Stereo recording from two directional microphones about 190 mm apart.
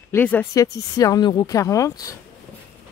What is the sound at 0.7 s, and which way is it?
Speech, 20° left (ahead or behind).